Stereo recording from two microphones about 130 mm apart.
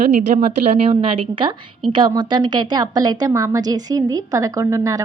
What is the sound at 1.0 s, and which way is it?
A woman's voice, 45° right (ahead or behind).